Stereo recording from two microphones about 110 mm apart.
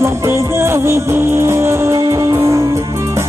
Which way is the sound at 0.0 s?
25° right (ahead or behind).